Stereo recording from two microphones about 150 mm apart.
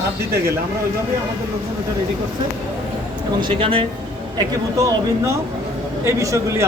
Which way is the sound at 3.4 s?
35° right (ahead or behind).